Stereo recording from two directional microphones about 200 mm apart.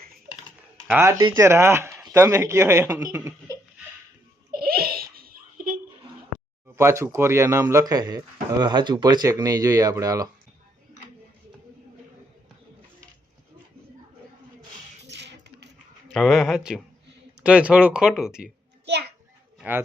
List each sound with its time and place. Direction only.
0.9 s speech: 10° right (ahead or behind)
1.2 s speech: 25° right (ahead or behind)
1.5 s speech: 15° right (ahead or behind)
4.5 s giggle: 50° right (ahead or behind)
6.7 s speech: 15° right (ahead or behind)
15.1 s coin: 60° right (ahead or behind)
16.1 s speech: centre (ahead or behind)
18.9 s children playing: 55° right (ahead or behind)